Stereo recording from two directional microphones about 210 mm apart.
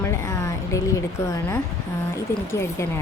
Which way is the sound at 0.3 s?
15° left (ahead or behind).